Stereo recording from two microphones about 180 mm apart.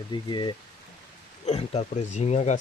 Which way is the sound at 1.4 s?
35° left (ahead or behind).